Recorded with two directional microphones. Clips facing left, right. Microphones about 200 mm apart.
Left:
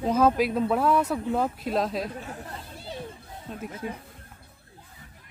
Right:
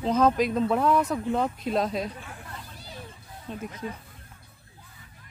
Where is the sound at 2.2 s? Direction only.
40° left (ahead or behind).